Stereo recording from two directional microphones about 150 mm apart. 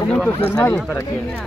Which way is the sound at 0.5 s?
20° left (ahead or behind).